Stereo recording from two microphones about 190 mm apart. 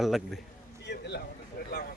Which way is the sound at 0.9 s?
60° left (ahead or behind).